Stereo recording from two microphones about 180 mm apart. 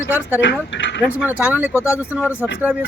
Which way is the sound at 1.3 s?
10° right (ahead or behind).